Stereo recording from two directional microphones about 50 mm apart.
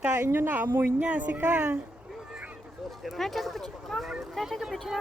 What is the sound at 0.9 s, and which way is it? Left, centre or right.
Speech, right.